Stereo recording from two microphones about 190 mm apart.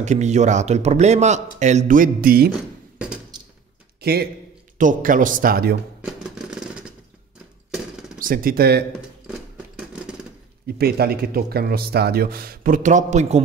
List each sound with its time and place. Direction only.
0.0 s speech: 35° right (ahead or behind)
4.0 s a man's voice: 55° right (ahead or behind)
4.7 s speech: 45° right (ahead or behind)
6.2 s a sound: 5° right (ahead or behind)
8.2 s speech: 50° right (ahead or behind)
10.7 s speech: 55° right (ahead or behind); by 13.4 s 40° right (ahead or behind)